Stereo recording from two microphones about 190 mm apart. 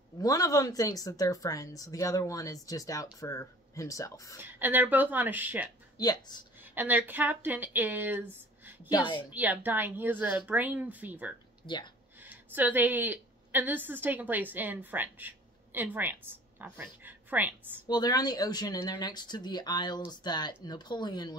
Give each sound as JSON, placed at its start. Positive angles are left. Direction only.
{"t": 0.2, "sound": "speech", "side_deg": 20}
{"t": 4.4, "sound": "speech", "side_deg": -10}
{"t": 5.9, "sound": "speech", "side_deg": 20}
{"t": 6.6, "sound": "speech", "side_deg": -10}
{"t": 8.9, "sound": "speech", "side_deg": 25}
{"t": 9.3, "sound": "speech", "side_deg": -10}
{"t": 11.6, "sound": "speech", "side_deg": 25}
{"t": 12.2, "sound": "a woman's voice", "side_deg": -10}
{"t": 17.8, "sound": "speech", "side_deg": 20}